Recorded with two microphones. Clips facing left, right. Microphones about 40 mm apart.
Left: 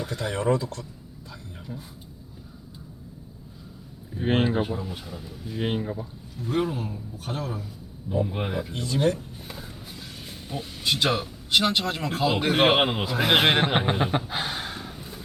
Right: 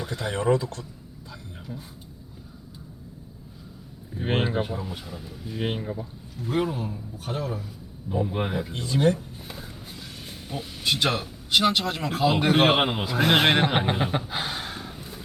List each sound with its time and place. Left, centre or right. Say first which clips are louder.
0.2 s speech: right 1 dB; right
4.2 s speech: left 2 dB; centre
8.7 s speech: even; right
9.6 s speech: even; centre